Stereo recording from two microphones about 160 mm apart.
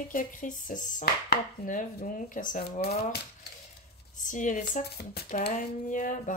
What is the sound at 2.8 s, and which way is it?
Speech, 80° left.